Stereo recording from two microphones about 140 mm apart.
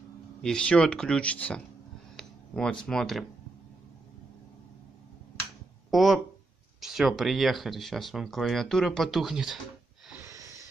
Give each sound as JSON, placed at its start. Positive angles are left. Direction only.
{"t": 0.4, "sound": "speech", "side_deg": 5}
{"t": 5.9, "sound": "speech", "side_deg": 0}
{"t": 10.2, "sound": "wheeze", "side_deg": -25}